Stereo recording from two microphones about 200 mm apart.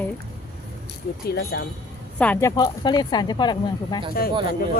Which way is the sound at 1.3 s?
55° left (ahead or behind).